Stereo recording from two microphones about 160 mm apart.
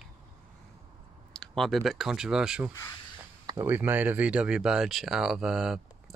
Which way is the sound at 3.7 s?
10° right (ahead or behind).